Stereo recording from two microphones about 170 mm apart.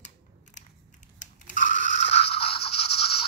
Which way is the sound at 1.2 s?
50° left (ahead or behind).